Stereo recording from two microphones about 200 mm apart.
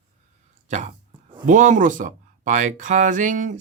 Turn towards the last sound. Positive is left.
turn(degrees=-40)  # may be behind; listen again after turning